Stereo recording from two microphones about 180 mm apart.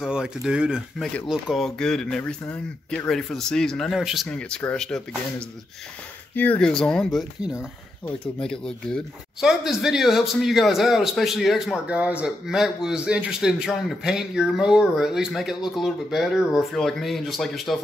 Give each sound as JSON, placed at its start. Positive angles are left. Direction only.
{"t": 0.0, "sound": "speech", "side_deg": -5}
{"t": 6.3, "sound": "speech", "side_deg": 10}